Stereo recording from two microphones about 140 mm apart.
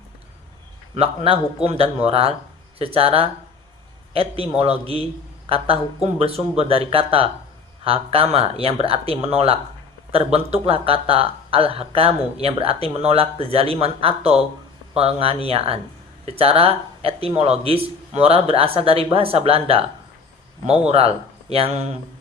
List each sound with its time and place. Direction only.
0.9 s speech: 45° right (ahead or behind)
20.8 s speech: 45° right (ahead or behind)